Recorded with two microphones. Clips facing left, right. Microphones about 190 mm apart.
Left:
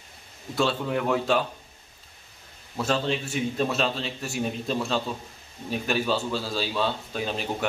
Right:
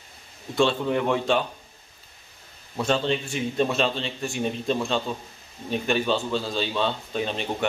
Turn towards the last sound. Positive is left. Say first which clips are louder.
# right 2 dB
turn(degrees=5)  # may be behind; listen again after turning